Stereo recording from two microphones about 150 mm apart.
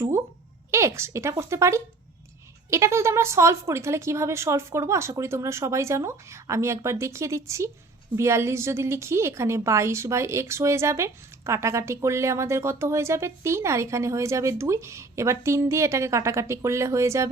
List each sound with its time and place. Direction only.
0.7 s a woman's voice: 20° right (ahead or behind)